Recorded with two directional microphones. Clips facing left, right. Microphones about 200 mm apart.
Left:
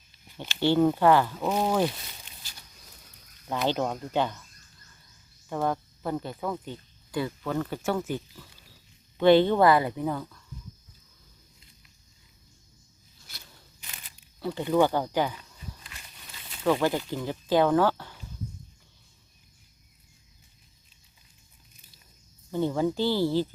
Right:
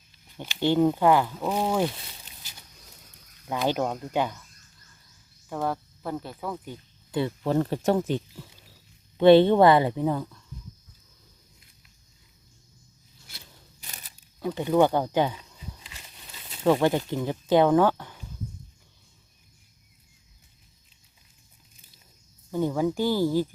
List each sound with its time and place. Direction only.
0.3 s speech: 15° right (ahead or behind)
3.5 s speech: 10° right (ahead or behind)
5.5 s speech: 5° right (ahead or behind)
7.1 s speech: 25° right (ahead or behind)
13.8 s wild animals: 40° right (ahead or behind)
14.4 s speech: 15° right (ahead or behind)
16.6 s speech: 20° right (ahead or behind)
22.5 s speech: 10° right (ahead or behind)